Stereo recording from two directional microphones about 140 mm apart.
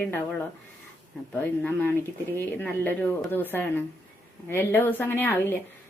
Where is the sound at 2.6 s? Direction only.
10° left (ahead or behind).